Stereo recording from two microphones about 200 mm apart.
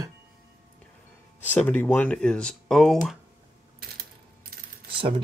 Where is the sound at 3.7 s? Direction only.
50° right (ahead or behind).